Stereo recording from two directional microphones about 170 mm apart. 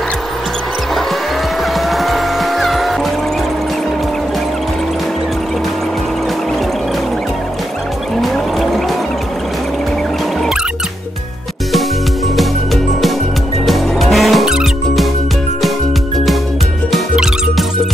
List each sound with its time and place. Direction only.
1.9 s music: centre (ahead or behind)
8.2 s music: centre (ahead or behind)
12.4 s music: centre (ahead or behind)
16.9 s music: centre (ahead or behind)